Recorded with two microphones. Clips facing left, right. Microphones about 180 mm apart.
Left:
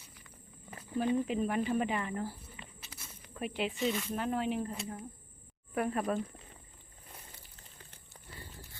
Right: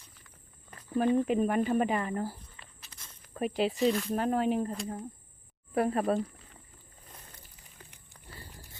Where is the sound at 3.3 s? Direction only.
40° right (ahead or behind).